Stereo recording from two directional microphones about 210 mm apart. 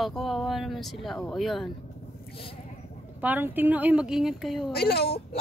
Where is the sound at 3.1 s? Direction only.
5° right (ahead or behind).